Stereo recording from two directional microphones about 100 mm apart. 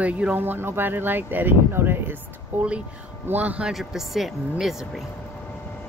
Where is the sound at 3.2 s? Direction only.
15° right (ahead or behind).